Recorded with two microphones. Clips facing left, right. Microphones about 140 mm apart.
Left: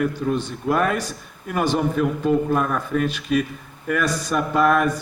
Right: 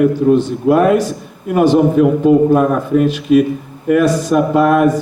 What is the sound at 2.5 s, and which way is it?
Speech, 35° right (ahead or behind).